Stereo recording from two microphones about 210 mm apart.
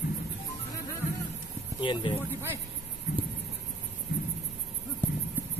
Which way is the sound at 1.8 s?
25° left (ahead or behind).